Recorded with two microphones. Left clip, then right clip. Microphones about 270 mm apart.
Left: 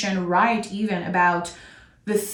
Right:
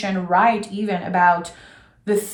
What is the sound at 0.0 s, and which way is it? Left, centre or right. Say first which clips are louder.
A woman's voice: right 3 dB; centre.